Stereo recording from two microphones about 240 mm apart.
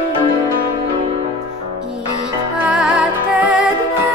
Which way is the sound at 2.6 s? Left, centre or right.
Centre.